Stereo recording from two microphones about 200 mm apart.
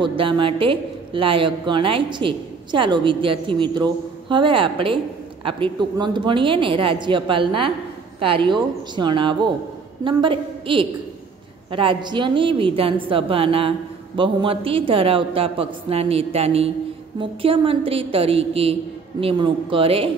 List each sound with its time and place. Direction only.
0.0 s a woman's voice: 25° right (ahead or behind)